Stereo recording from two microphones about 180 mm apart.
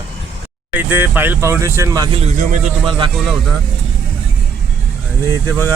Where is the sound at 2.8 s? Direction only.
30° right (ahead or behind).